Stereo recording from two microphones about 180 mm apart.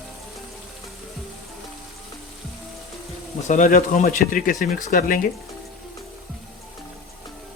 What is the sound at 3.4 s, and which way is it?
Speech, 45° left (ahead or behind).